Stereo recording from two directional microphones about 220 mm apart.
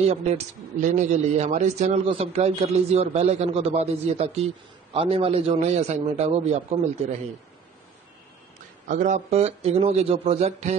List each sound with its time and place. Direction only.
0.1 s a man's voice: 30° right (ahead or behind)
8.8 s a man's voice: 35° right (ahead or behind)